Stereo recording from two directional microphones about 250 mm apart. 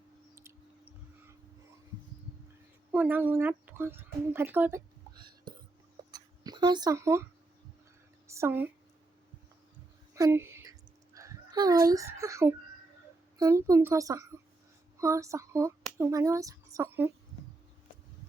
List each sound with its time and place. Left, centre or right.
0.3 s chewing: centre
2.9 s speech: centre
5.5 s a sound: centre
8.3 s a woman's voice: centre
10.2 s a sound: centre
13.4 s speech: centre